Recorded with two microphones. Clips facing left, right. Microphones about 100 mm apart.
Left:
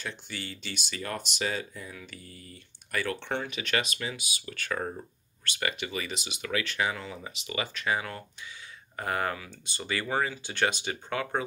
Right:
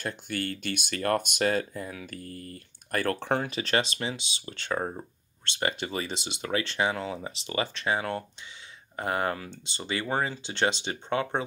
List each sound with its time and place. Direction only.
0.0 s speech: 50° right (ahead or behind); by 11.4 s 25° right (ahead or behind)